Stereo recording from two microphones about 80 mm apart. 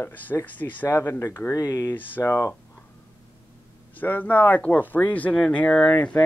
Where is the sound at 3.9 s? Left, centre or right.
Left.